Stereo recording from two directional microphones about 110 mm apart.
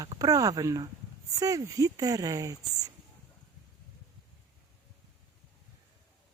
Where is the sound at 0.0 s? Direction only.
35° right (ahead or behind).